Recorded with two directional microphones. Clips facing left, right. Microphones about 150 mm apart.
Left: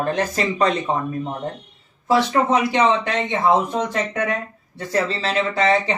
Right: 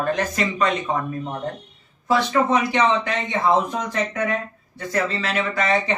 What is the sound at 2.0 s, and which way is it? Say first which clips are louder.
Speech: left 2 dB; 20° left (ahead or behind).